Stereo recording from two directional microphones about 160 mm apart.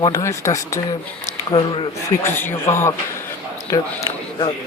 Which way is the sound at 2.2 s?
15° left (ahead or behind).